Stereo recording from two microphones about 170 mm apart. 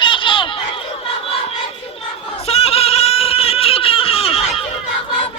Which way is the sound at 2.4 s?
35° left (ahead or behind).